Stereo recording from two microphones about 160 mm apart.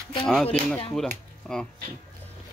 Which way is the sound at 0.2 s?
5° left (ahead or behind).